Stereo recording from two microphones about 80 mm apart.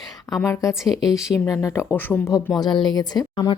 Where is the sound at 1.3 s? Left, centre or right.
Left.